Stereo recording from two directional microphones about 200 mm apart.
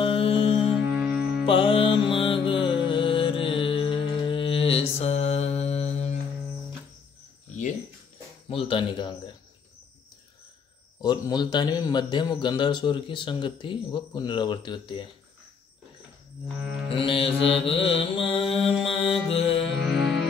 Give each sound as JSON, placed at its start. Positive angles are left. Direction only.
{"t": 0.0, "sound": "music", "side_deg": 25}
{"t": 0.7, "sound": "music", "side_deg": 0}
{"t": 1.4, "sound": "music", "side_deg": 25}
{"t": 8.5, "sound": "a man's voice", "side_deg": 25}
{"t": 11.0, "sound": "a man's voice", "side_deg": 20}
{"t": 16.9, "sound": "a man's voice", "side_deg": 25}
{"t": 19.3, "sound": "music", "side_deg": 30}
{"t": 19.8, "sound": "music", "side_deg": 0}